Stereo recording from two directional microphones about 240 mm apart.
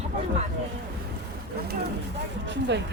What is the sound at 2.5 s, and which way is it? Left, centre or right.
Speech, right.